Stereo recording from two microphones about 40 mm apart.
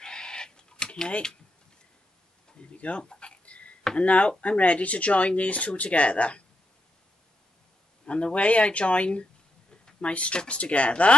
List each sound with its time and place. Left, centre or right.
0.0 s chicken: centre
2.7 s speech: left
3.1 s a sound: left
4.0 s speech: left
8.0 s speech: left